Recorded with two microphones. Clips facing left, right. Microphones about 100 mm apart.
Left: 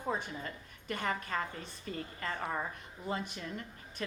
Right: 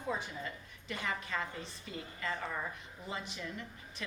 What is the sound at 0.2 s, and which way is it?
A woman's voice, 45° left (ahead or behind).